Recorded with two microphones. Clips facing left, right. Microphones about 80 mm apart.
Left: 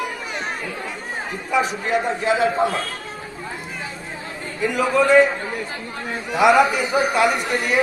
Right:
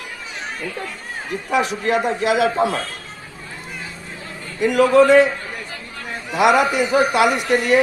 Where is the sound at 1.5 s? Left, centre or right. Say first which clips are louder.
Right 1 dB; right.